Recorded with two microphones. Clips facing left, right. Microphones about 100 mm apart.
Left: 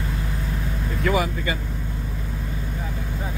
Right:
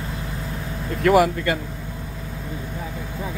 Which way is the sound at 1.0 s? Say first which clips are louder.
Right 7 dB; 75° right (ahead or behind).